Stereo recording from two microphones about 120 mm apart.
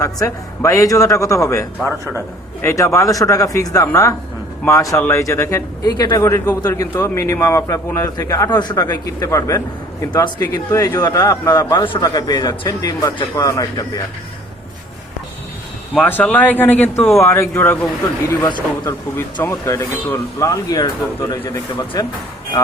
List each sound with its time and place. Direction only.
0.0 s a man's voice: 25° left (ahead or behind)
5.9 s a man's voice: 35° left (ahead or behind)
6.1 s a man's voice: 25° left (ahead or behind)
10.5 s a man's voice: 30° left (ahead or behind)
16.0 s speech: 15° left (ahead or behind)
18.3 s a man's voice: 35° left (ahead or behind)
18.9 s a man's voice: 15° left (ahead or behind)
21.4 s speech: 20° left (ahead or behind)